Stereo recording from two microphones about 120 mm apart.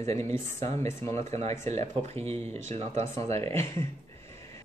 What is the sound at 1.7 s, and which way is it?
Speech, 65° right (ahead or behind).